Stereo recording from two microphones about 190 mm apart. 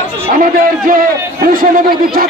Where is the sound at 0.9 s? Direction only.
45° right (ahead or behind).